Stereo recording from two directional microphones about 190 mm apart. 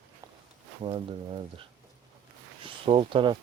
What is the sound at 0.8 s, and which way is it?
Speech, 30° right (ahead or behind).